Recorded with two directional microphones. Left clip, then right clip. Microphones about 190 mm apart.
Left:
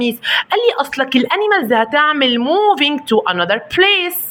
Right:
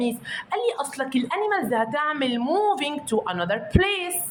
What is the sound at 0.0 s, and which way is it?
A woman's voice, 30° left (ahead or behind).